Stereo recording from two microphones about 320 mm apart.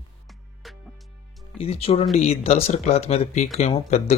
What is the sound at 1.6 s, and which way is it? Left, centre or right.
Speech, centre.